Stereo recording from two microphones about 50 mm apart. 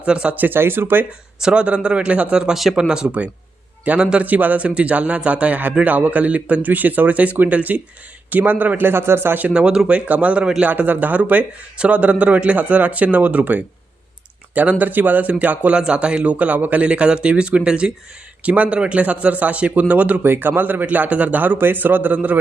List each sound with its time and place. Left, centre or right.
0.0 s speech: right
0.3 s a man's voice: right
1.4 s speech: centre
3.8 s speech: right
8.8 s a man's voice: right
9.5 s speech: centre
20.2 s a man's voice: right